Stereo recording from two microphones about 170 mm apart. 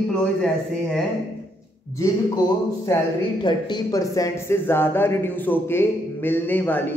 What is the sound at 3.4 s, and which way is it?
Speech, 25° left (ahead or behind).